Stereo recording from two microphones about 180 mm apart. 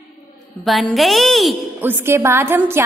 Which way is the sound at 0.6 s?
Centre (ahead or behind).